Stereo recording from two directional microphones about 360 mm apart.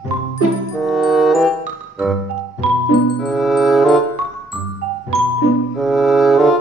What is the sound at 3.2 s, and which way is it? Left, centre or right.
Music, centre.